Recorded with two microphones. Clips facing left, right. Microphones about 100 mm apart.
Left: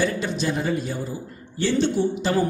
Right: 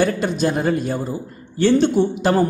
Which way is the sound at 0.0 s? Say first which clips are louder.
Right 5 dB; 50° right (ahead or behind).